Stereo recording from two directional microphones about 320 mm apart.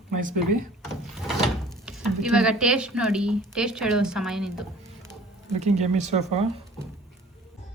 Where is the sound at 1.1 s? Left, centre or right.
Centre.